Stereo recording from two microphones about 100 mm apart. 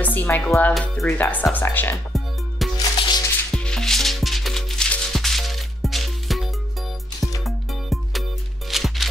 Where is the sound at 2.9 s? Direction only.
50° left (ahead or behind).